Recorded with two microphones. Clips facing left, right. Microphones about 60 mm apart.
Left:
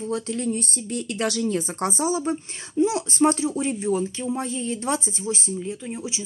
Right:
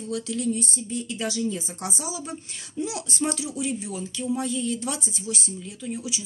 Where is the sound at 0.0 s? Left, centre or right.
Left.